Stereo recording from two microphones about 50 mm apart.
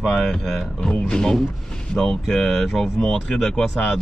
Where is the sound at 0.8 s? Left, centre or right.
Centre.